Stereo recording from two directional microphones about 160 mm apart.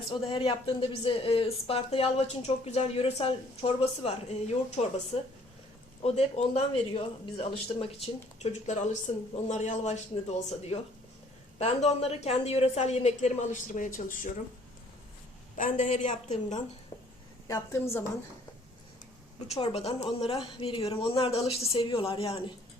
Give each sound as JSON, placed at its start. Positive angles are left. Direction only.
{"t": 0.1, "sound": "a woman's voice", "side_deg": 35}
{"t": 6.0, "sound": "speech", "side_deg": 40}
{"t": 15.5, "sound": "a woman's voice", "side_deg": 50}
{"t": 17.5, "sound": "a woman's voice", "side_deg": 15}
{"t": 19.5, "sound": "speech", "side_deg": 40}